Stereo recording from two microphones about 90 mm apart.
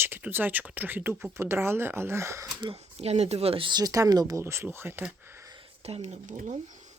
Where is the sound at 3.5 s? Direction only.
90° right.